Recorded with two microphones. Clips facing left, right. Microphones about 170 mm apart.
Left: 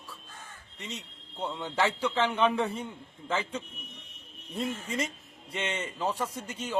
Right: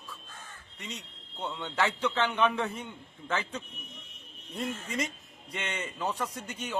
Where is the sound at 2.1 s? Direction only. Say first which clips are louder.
Left 2 dB; 30° left (ahead or behind).